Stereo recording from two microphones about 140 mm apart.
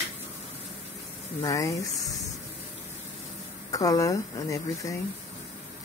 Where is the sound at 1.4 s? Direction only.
25° left (ahead or behind).